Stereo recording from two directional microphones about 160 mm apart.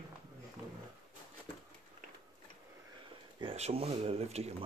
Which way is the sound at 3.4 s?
40° right (ahead or behind).